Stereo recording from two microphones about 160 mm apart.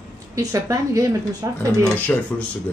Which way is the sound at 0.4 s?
20° right (ahead or behind).